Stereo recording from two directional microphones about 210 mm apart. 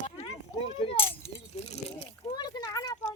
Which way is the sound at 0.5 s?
25° left (ahead or behind).